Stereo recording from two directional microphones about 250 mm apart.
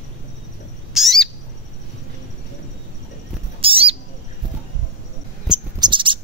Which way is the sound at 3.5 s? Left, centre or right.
Right.